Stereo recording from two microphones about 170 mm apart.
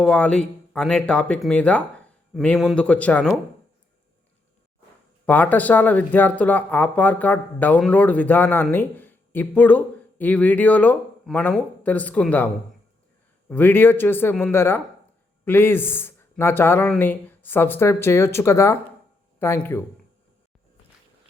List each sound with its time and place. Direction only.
0.0 s speech: 5° left (ahead or behind)
5.2 s speech: 10° left (ahead or behind)
13.5 s speech: 10° left (ahead or behind)